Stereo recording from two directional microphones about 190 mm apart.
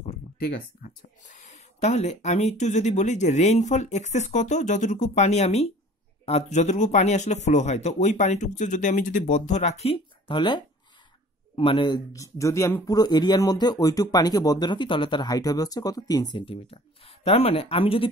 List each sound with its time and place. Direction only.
0.4 s speech: 50° left (ahead or behind); by 18.1 s 30° left (ahead or behind)